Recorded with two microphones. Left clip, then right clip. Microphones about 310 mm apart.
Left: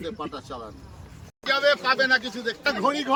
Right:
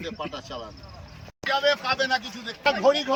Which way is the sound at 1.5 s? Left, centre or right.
Centre.